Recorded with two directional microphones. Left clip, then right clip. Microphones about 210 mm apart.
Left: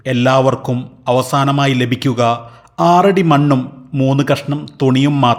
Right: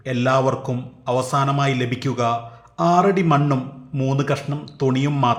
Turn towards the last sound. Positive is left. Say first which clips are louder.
# left 7 dB
turn(degrees=25)  # may be behind; listen again after turning